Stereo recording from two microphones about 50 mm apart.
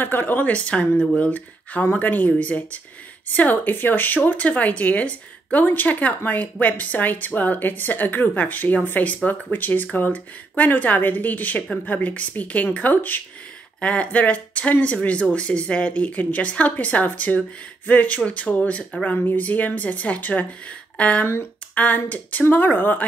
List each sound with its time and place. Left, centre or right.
0.0 s speech: left
0.5 s speech: left